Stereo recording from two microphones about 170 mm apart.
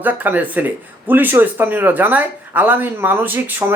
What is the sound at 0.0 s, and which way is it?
Speech, 10° right (ahead or behind).